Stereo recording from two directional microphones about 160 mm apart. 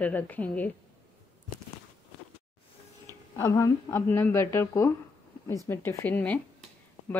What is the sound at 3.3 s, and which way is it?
A woman's voice, 20° left (ahead or behind).